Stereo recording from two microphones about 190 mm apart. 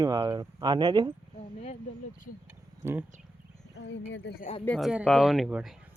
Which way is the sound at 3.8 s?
65° left (ahead or behind).